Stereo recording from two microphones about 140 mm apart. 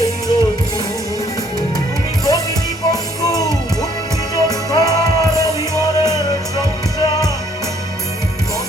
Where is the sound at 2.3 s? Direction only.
25° left (ahead or behind).